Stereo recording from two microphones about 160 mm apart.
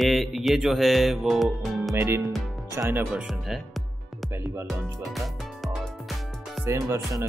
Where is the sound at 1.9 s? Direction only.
15° right (ahead or behind).